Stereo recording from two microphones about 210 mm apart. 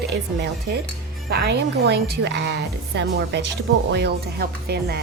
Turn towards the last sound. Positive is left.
turn(degrees=-50)  # may be behind; listen again after turning